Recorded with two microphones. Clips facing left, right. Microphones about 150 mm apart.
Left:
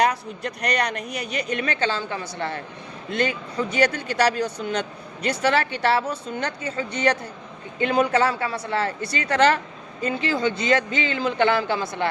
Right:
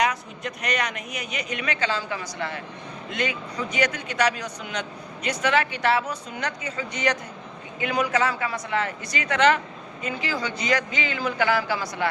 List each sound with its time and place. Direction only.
0.0 s a man's voice: 35° left (ahead or behind)